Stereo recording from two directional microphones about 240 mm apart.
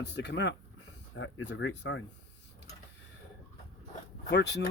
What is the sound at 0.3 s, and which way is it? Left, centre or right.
Speech, left.